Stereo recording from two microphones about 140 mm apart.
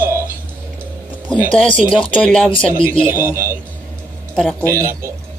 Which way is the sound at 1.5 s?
5° left (ahead or behind).